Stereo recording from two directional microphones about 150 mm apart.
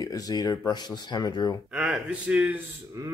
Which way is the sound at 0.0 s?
25° left (ahead or behind).